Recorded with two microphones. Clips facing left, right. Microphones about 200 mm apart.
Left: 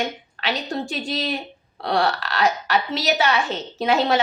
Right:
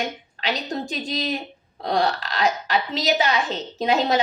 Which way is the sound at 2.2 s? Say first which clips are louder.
Left 1 dB; 35° right (ahead or behind).